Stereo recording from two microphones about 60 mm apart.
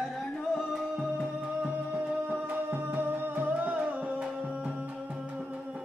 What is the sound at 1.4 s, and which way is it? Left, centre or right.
Music, centre.